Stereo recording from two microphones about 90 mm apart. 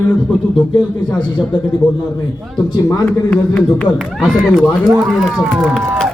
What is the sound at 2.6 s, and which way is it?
Speech, 45° left (ahead or behind).